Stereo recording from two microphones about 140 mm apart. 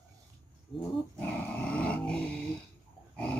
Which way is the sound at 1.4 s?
10° left (ahead or behind).